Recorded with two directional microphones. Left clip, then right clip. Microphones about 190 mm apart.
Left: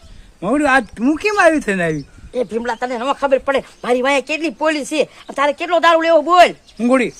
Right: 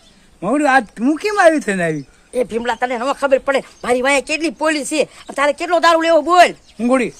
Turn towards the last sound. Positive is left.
turn(degrees=5)  # may be behind; listen again after turning